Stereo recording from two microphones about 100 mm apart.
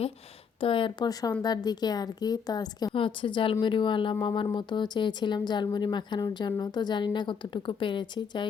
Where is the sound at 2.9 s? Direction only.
60° left (ahead or behind).